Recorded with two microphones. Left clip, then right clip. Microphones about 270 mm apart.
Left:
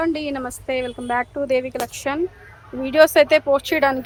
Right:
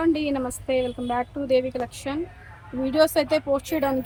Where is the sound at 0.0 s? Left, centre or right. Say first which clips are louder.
Even; centre.